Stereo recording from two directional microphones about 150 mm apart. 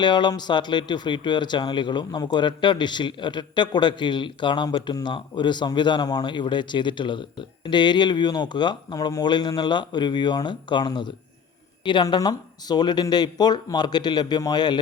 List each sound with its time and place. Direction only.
0.0 s speech: 30° left (ahead or behind)